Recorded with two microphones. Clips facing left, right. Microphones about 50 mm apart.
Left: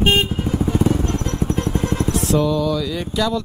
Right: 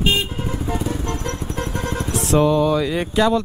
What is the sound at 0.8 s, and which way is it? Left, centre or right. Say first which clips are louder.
Vehicle: left 6 dB; left.